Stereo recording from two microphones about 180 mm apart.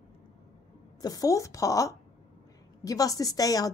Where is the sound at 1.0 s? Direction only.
20° left (ahead or behind).